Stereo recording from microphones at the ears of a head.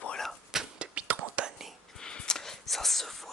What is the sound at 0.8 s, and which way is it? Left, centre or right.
Whispering, right.